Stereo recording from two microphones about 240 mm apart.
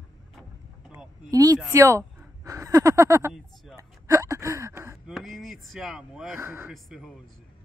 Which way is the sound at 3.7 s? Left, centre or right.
Centre.